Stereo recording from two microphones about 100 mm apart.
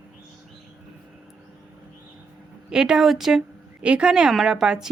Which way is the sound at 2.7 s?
5° right (ahead or behind).